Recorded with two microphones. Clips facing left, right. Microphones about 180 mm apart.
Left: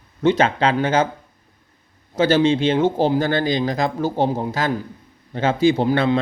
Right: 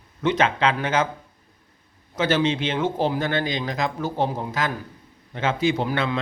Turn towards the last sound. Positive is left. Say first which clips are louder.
# left 6 dB
turn(degrees=35)  # may be behind; listen again after turning